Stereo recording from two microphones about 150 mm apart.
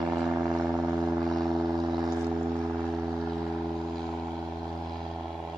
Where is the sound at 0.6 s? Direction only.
Centre (ahead or behind).